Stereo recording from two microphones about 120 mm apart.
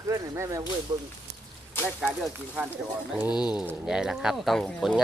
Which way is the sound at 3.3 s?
35° left (ahead or behind).